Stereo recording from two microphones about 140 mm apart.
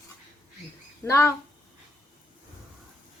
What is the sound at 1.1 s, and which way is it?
Speech, 20° left (ahead or behind).